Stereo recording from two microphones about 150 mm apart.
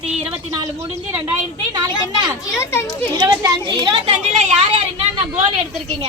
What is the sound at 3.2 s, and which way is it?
Speech, 30° right (ahead or behind).